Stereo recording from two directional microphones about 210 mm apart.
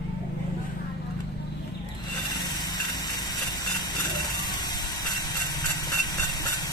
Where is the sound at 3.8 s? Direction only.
20° left (ahead or behind).